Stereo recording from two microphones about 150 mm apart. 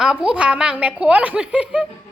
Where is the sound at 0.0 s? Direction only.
5° right (ahead or behind).